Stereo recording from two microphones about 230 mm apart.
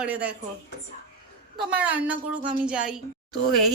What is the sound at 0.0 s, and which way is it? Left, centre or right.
Speech, centre.